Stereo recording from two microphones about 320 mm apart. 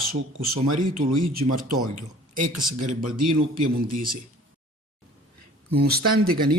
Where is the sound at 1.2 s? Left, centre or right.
Right.